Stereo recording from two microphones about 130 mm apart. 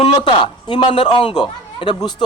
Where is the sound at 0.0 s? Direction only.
40° left (ahead or behind).